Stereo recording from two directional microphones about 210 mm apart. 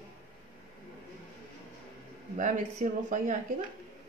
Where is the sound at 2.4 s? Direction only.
35° right (ahead or behind).